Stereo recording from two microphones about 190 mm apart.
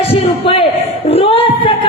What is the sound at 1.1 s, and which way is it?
Singing, 30° left (ahead or behind).